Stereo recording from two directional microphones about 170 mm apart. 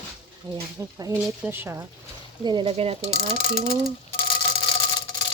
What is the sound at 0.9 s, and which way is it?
Speech, 15° right (ahead or behind).